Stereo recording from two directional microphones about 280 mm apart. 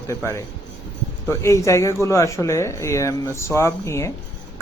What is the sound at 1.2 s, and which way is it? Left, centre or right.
A man's voice, centre.